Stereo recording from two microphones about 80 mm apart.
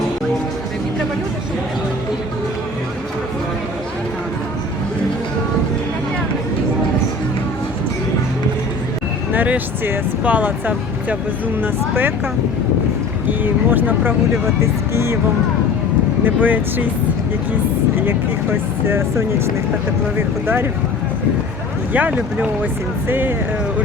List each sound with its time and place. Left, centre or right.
9.3 s speech: right
13.4 s speech: right
14.6 s speech: right
16.2 s speech: right
17.9 s speech: right
21.9 s speech: centre